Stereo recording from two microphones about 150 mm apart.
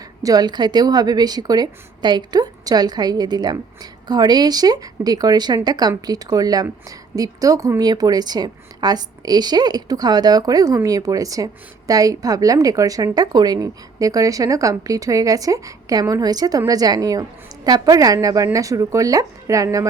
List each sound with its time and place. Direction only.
0.2 s a woman's voice: 25° right (ahead or behind)